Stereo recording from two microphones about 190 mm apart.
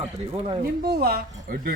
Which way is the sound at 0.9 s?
55° right (ahead or behind).